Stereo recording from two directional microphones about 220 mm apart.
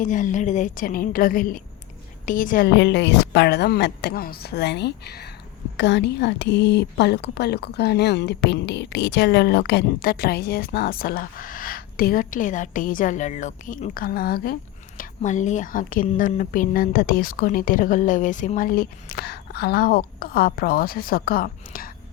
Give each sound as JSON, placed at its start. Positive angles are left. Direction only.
{"t": 0.0, "sound": "a woman's voice", "side_deg": 35}